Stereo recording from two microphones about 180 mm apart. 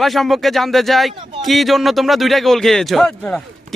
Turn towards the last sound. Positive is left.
turn(degrees=5)  # may be behind; listen again after turning